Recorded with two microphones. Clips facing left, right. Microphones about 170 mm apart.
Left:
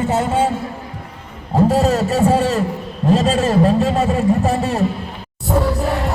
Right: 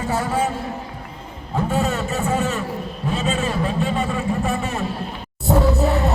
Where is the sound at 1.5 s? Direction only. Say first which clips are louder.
Left 7 dB; 35° left (ahead or behind).